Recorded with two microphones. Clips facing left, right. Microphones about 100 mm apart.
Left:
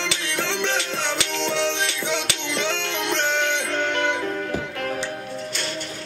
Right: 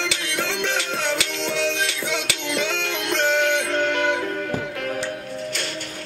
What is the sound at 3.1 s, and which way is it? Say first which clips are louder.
Music: right 4 dB; 5° right (ahead or behind).